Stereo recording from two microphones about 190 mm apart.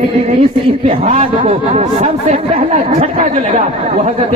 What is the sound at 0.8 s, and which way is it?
Speech, 30° right (ahead or behind).